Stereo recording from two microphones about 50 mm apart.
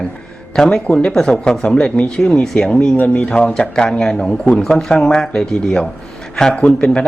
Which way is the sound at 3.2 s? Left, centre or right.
Centre.